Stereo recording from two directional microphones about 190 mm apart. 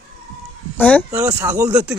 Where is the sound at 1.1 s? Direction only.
15° right (ahead or behind).